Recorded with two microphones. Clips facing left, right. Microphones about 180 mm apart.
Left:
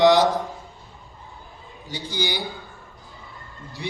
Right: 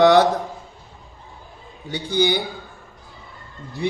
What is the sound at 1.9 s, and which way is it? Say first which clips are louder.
Speech: right 8 dB; 60° right (ahead or behind).